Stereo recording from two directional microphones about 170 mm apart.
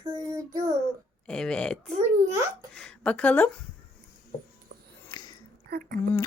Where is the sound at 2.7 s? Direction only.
5° left (ahead or behind).